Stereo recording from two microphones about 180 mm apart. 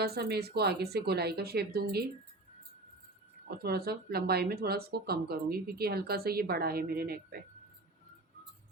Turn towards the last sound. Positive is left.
turn(degrees=-60)  # may be behind; listen again after turning